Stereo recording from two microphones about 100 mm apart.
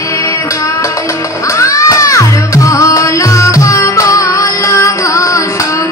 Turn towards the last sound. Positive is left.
turn(degrees=35)  # may be behind; listen again after turning